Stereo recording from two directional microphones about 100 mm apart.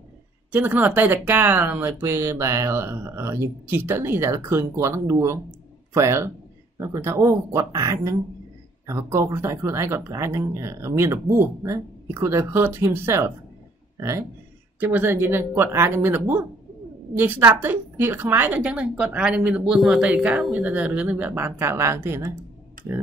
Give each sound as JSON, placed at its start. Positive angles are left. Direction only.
{"t": 0.5, "sound": "a woman's voice", "side_deg": -20}